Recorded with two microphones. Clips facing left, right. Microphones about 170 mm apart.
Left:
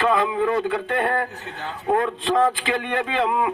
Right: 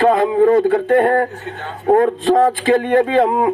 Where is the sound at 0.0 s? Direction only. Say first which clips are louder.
Right 8 dB; 45° right (ahead or behind).